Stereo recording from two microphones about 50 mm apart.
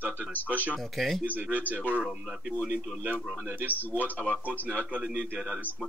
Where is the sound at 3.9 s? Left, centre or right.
Left.